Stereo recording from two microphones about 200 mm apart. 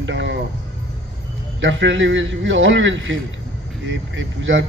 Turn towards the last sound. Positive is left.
turn(degrees=-70)  # may be behind; listen again after turning